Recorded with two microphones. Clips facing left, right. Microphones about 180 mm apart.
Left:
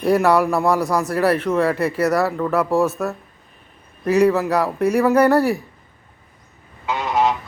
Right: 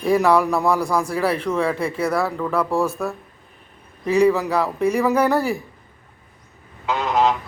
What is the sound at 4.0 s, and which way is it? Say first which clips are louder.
Speech: left 1 dB; 5° left (ahead or behind).